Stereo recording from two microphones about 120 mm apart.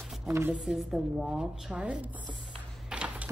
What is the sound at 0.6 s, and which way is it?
A woman's voice, 5° right (ahead or behind).